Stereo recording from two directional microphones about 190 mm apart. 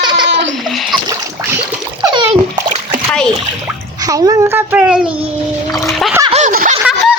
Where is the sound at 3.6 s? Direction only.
20° right (ahead or behind).